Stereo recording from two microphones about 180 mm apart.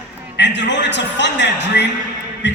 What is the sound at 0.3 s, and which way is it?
A man's voice, 75° left (ahead or behind).